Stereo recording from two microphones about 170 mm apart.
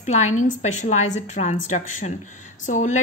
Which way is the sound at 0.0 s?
45° left (ahead or behind).